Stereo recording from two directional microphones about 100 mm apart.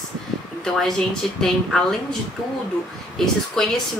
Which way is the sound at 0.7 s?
5° left (ahead or behind).